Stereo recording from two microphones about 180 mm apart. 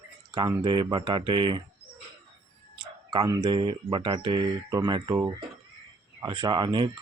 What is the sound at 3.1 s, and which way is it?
Speech, 25° right (ahead or behind).